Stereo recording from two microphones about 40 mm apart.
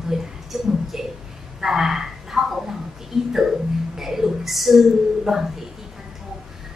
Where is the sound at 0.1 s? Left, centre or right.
Centre.